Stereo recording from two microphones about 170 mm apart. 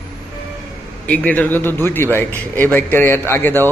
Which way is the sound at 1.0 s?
10° left (ahead or behind).